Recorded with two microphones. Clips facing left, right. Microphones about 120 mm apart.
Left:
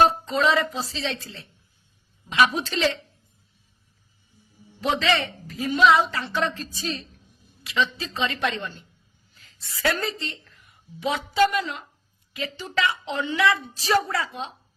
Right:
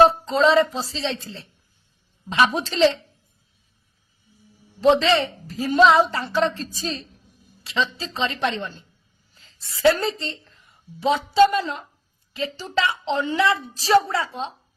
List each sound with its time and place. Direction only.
0.0 s a woman's voice: 30° right (ahead or behind)
4.8 s a woman's voice: 30° right (ahead or behind)